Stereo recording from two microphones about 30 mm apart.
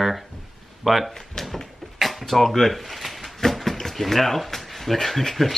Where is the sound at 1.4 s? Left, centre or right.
Centre.